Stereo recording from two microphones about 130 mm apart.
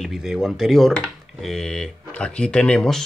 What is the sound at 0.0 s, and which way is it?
Speech, centre (ahead or behind).